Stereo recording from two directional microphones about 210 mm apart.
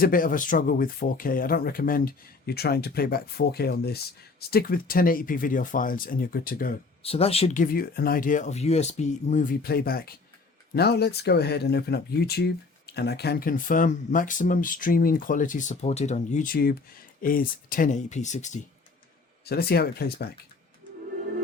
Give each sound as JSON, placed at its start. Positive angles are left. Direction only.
{"t": 0.0, "sound": "speech", "side_deg": 40}
{"t": 7.0, "sound": "speech", "side_deg": 30}
{"t": 19.5, "sound": "speech", "side_deg": 50}